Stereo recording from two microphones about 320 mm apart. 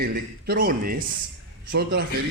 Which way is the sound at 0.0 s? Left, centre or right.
Right.